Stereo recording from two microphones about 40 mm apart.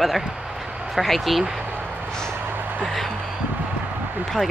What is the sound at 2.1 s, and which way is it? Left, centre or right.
Vehicle, centre.